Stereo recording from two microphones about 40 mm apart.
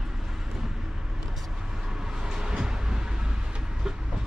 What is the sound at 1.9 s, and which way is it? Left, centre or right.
Vehicle, centre.